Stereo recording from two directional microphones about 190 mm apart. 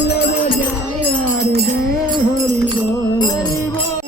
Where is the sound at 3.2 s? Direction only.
20° left (ahead or behind).